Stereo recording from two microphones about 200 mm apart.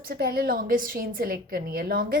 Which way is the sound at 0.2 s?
50° right (ahead or behind).